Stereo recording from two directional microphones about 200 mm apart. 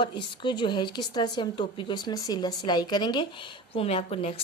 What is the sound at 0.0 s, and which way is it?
A woman's voice, 25° left (ahead or behind).